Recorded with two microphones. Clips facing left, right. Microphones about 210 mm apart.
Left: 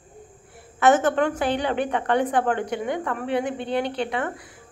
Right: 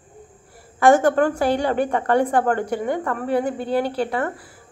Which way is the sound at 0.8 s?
10° right (ahead or behind).